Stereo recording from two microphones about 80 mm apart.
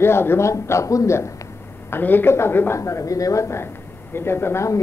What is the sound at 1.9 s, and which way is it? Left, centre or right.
A man's voice, left.